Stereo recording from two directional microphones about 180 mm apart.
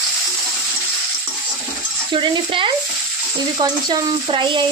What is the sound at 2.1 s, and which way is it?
Speech, 30° right (ahead or behind).